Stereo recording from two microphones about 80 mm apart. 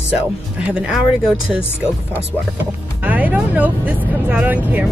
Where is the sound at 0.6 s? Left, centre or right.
Centre.